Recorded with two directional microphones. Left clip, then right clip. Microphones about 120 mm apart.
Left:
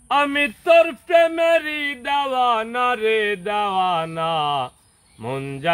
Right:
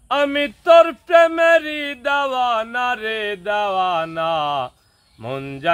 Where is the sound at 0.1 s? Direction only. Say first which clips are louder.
Even; 25° right (ahead or behind).